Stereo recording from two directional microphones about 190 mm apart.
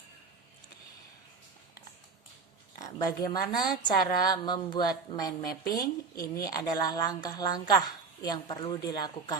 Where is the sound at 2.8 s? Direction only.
20° left (ahead or behind).